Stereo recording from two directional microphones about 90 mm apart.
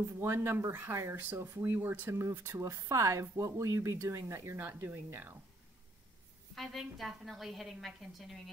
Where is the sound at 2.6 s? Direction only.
35° right (ahead or behind).